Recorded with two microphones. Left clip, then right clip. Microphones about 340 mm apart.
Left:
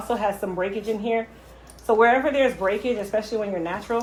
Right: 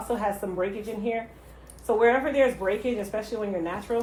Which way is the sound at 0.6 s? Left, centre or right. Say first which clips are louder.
Left 4 dB; left.